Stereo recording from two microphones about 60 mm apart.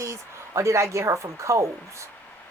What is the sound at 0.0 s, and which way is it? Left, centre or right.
Speech, right.